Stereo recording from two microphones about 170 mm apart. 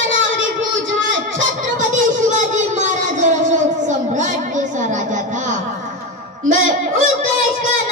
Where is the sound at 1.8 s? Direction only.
45° right (ahead or behind).